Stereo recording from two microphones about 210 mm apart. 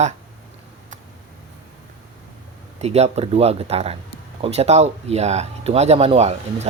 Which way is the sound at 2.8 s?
30° right (ahead or behind).